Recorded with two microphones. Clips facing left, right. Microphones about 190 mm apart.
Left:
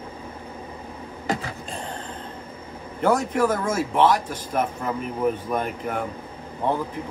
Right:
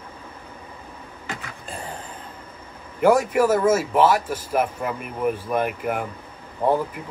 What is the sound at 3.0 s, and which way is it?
Speech, 10° right (ahead or behind).